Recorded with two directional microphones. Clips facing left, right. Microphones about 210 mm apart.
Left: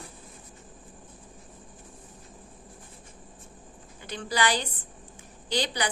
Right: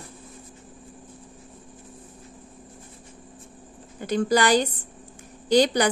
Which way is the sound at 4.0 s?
45° right (ahead or behind).